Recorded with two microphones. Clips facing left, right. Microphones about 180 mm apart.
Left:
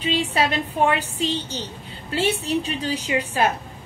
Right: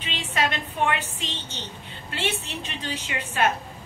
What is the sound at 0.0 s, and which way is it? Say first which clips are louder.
A woman's voice: left 6 dB; 35° left (ahead or behind).